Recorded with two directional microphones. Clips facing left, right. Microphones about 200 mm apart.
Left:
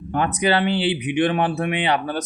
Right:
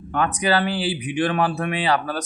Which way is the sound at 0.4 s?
25° left (ahead or behind).